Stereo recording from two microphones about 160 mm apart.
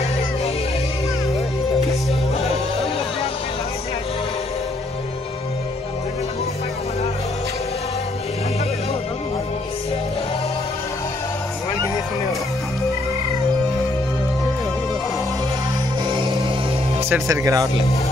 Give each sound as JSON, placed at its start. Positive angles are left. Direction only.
{"t": 16.1, "sound": "music", "side_deg": -30}
{"t": 17.1, "sound": "speech", "side_deg": -20}